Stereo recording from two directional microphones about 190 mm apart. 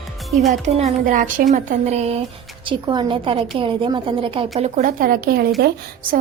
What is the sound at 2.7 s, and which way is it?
A woman's voice, 25° right (ahead or behind).